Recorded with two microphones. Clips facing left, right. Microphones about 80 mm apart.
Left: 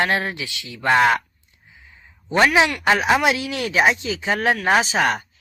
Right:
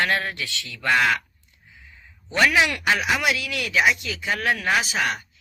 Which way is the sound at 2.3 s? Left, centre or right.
Left.